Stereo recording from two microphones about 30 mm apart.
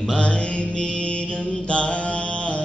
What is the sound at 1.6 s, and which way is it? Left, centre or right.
Mantra, left.